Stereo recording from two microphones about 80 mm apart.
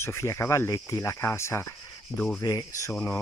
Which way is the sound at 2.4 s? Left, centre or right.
Left.